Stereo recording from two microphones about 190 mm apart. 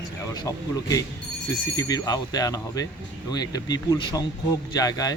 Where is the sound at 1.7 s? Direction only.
20° left (ahead or behind).